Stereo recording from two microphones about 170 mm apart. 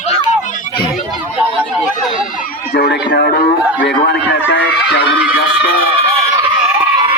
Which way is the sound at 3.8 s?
85° left.